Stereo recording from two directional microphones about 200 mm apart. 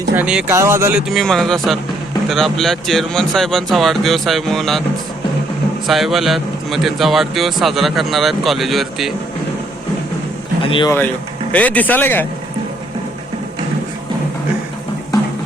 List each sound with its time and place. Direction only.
0.2 s a man's voice: 5° right (ahead or behind)
5.8 s a man's voice: centre (ahead or behind)
10.6 s speech: 25° left (ahead or behind)
11.5 s speech: 10° left (ahead or behind)